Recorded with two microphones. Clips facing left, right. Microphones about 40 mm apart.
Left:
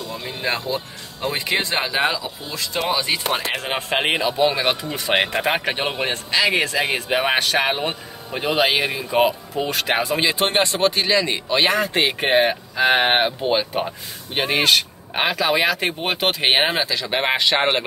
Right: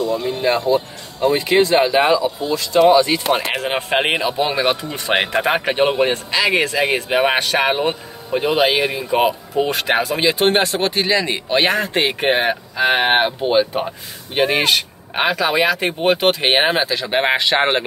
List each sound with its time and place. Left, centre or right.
0.2 s speech: centre
9.5 s speech: centre
10.1 s speech: centre
10.5 s a man's voice: centre
11.6 s speech: centre
16.8 s a man's voice: centre